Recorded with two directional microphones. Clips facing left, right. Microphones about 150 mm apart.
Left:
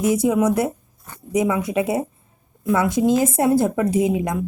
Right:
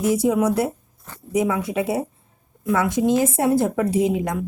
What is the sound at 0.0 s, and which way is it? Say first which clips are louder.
Speech: left 1 dB; 20° left (ahead or behind).